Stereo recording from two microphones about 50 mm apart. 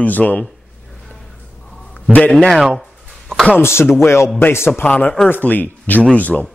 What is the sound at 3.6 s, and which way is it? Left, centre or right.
Speech, left.